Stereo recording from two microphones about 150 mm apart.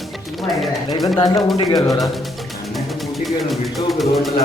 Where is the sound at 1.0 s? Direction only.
25° left (ahead or behind).